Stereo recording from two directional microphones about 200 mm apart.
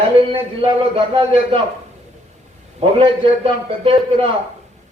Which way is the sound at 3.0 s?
25° right (ahead or behind).